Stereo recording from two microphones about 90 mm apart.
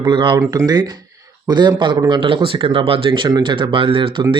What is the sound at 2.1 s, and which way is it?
Speech, 70° right (ahead or behind).